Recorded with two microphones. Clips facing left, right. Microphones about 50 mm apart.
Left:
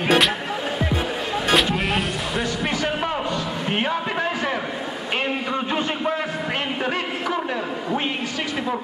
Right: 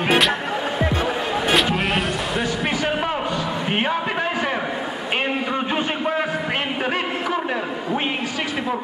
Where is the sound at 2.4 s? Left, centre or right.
Centre.